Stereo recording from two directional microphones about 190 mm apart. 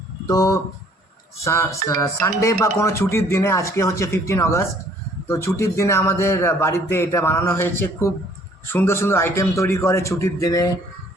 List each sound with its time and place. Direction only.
0.3 s speech: 20° left (ahead or behind)